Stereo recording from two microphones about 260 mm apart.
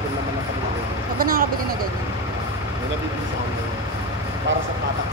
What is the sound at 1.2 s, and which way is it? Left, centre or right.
Speech, right.